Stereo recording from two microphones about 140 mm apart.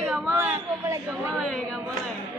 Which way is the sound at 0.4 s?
20° right (ahead or behind).